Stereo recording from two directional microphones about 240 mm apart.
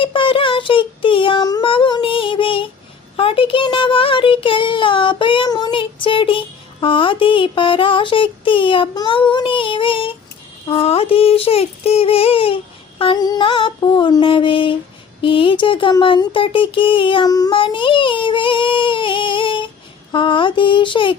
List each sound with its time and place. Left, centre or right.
0.0 s child singing: left
10.7 s a sound: left
20.1 s mantra: centre